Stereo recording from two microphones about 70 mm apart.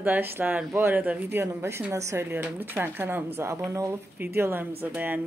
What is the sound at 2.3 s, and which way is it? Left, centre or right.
Speech, right.